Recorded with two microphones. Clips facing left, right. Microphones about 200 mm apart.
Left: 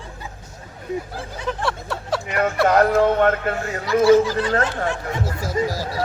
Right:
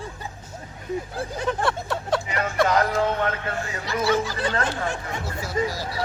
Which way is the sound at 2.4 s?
55° left (ahead or behind).